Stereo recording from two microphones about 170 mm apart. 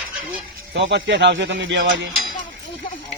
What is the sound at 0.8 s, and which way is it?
A man's voice, 90° right.